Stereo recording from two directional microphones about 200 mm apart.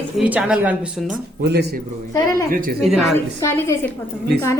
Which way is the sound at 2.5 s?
45° right (ahead or behind).